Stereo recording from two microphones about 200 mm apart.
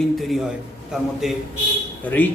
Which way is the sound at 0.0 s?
Centre (ahead or behind).